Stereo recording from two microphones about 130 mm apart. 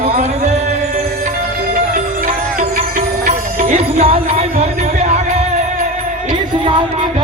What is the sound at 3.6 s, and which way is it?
Music, 55° right (ahead or behind).